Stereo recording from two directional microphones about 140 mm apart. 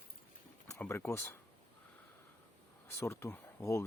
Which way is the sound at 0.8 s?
20° left (ahead or behind).